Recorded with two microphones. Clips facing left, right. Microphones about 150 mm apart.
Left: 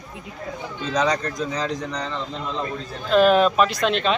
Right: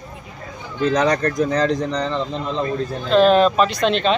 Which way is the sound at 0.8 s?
55° right (ahead or behind).